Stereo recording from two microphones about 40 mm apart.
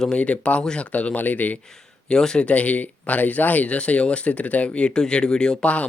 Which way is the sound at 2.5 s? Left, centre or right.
Left.